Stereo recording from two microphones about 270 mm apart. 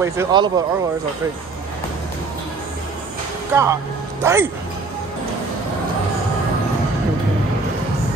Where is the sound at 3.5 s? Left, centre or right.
Centre.